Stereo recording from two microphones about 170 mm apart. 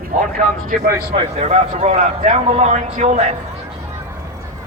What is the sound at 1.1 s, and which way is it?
A man's voice, 35° right (ahead or behind).